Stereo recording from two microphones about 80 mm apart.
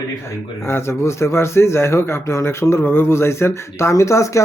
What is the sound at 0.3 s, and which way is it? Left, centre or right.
Speech, left.